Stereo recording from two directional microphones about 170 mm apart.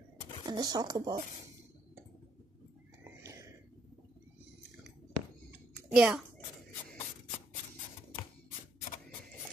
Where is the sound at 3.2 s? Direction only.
15° right (ahead or behind).